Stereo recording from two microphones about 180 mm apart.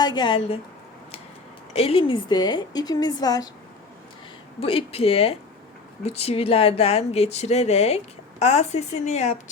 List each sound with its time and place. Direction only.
0.0 s a woman's voice: 25° left (ahead or behind)
1.7 s a woman's voice: 35° left (ahead or behind)
4.6 s speech: 30° left (ahead or behind)